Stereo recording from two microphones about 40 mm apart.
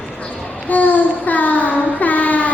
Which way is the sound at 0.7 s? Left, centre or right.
Left.